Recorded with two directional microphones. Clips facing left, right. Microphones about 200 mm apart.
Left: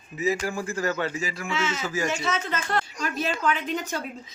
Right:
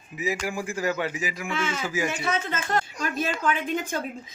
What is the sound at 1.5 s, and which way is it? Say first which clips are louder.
Speech: left 1 dB; 55° right (ahead or behind).